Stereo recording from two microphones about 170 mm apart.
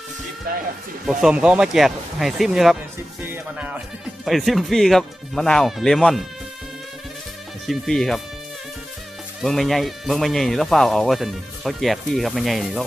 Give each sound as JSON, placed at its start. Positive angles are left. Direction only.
{"t": 0.5, "sound": "speech", "side_deg": -55}
{"t": 1.0, "sound": "speech", "side_deg": -5}
{"t": 4.3, "sound": "speech", "side_deg": 0}
{"t": 7.7, "sound": "speech", "side_deg": 0}
{"t": 9.4, "sound": "speech", "side_deg": 0}